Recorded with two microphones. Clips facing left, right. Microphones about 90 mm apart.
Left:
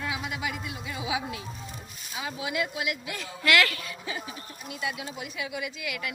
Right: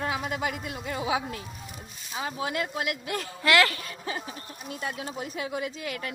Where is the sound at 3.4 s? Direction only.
30° right (ahead or behind).